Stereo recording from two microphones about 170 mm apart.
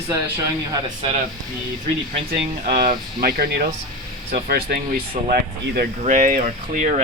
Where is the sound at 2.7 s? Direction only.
60° right (ahead or behind).